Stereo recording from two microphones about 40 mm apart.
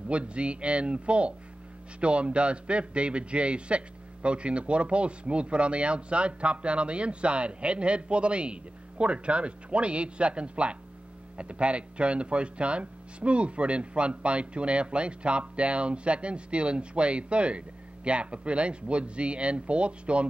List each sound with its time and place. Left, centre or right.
0.1 s speech: right